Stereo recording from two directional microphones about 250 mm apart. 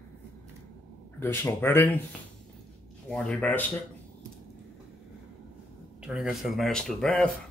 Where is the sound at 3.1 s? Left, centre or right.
Centre.